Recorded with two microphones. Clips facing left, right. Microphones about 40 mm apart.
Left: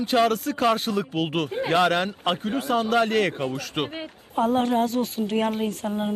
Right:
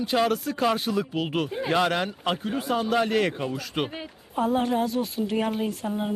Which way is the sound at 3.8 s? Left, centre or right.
Centre.